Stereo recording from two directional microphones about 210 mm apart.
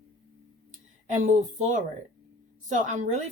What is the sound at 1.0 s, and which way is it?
A woman's voice, 35° right (ahead or behind).